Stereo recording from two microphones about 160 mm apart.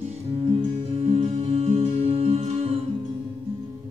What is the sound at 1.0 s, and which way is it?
Music, 40° right (ahead or behind).